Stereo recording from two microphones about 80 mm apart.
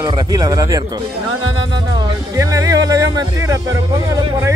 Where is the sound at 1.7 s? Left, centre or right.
Right.